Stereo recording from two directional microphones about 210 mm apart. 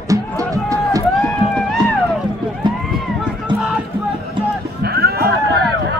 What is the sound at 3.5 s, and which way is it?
Music, 20° right (ahead or behind).